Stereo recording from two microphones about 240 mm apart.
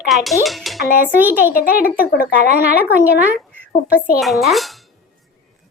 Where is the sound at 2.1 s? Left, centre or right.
Left.